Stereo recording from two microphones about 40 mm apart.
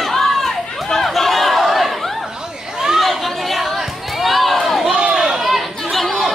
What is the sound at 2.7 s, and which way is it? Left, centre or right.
Chatter, centre.